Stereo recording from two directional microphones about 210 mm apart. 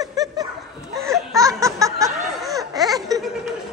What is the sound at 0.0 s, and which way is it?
Dog, 15° right (ahead or behind).